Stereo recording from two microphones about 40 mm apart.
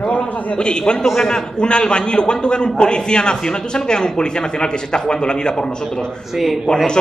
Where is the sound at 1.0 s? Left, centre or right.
Centre.